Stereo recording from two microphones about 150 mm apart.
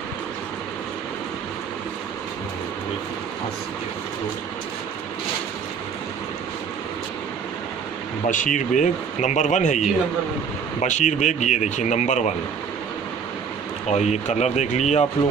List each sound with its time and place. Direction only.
8.3 s speech: 60° left (ahead or behind)
13.8 s speech: 50° left (ahead or behind)